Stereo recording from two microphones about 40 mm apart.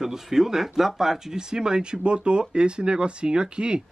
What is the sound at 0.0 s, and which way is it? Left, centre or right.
Speech, centre.